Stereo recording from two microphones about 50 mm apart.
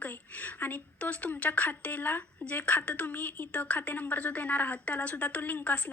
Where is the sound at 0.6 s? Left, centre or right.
Left.